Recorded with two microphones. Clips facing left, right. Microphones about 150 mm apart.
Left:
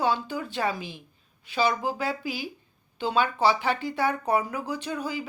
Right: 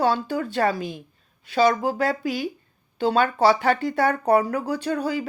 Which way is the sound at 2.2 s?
5° left (ahead or behind).